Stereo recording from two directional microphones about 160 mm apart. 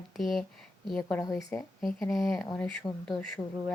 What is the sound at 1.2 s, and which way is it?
Speech, 20° left (ahead or behind).